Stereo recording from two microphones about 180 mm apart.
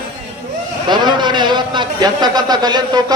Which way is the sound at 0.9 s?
25° right (ahead or behind).